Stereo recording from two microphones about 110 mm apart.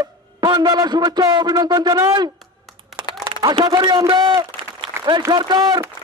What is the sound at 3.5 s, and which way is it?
A man's voice, 50° right (ahead or behind).